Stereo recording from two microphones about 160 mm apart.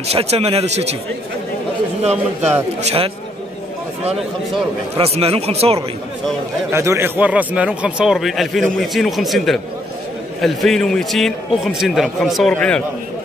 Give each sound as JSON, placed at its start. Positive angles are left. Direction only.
{"t": 0.1, "sound": "a man's voice", "side_deg": -40}
{"t": 2.8, "sound": "a man's voice", "side_deg": -40}
{"t": 4.9, "sound": "a man's voice", "side_deg": -40}
{"t": 6.7, "sound": "a man's voice", "side_deg": -15}